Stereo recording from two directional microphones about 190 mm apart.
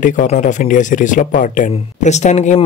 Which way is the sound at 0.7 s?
45° left (ahead or behind).